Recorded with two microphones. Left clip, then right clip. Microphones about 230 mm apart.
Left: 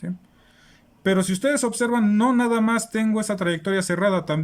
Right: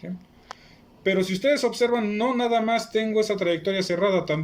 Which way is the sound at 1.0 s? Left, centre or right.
Left.